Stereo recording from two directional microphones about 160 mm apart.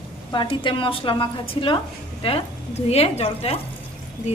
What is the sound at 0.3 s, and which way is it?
A woman's voice, 30° left (ahead or behind).